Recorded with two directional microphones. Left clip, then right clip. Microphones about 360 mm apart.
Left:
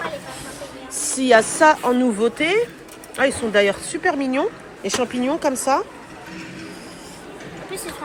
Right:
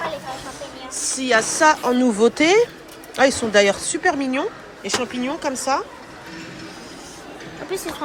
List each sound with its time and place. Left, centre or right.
1.0 s speech: centre
7.7 s speech: right